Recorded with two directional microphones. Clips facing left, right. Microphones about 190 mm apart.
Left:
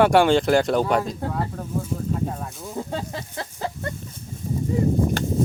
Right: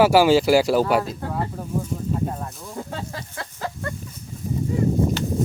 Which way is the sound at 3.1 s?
25° left (ahead or behind).